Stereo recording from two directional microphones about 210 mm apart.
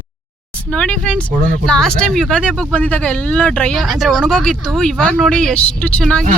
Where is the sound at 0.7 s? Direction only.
5° left (ahead or behind).